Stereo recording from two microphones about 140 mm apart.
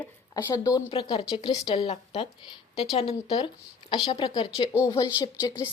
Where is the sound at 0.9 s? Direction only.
40° left (ahead or behind).